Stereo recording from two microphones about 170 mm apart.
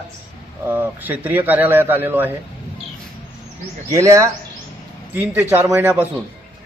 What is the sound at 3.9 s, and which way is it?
A man's voice, 20° right (ahead or behind).